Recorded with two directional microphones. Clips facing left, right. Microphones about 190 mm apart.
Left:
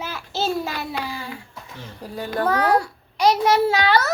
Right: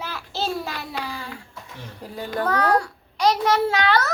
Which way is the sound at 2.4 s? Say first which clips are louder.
Left 2 dB; 10° left (ahead or behind).